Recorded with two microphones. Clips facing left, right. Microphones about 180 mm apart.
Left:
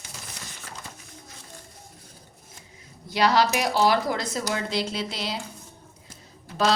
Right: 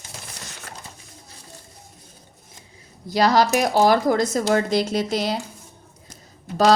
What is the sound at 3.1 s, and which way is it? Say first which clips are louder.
Speech: right 4 dB; 40° right (ahead or behind).